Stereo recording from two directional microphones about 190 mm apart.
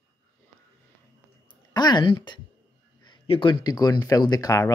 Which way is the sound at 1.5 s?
20° left (ahead or behind).